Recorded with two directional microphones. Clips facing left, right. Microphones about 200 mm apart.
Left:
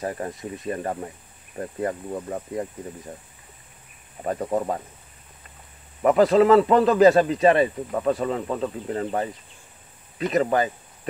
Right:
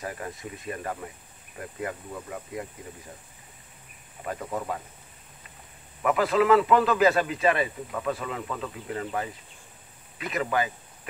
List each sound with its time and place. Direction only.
0.0 s speech: 35° left (ahead or behind)
4.2 s speech: 35° left (ahead or behind)
6.0 s speech: 35° left (ahead or behind)